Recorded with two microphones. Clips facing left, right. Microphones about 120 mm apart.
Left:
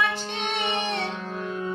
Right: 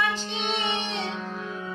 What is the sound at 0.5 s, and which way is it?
Music, 55° left (ahead or behind).